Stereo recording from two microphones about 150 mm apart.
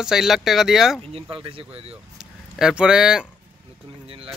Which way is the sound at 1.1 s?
40° right (ahead or behind).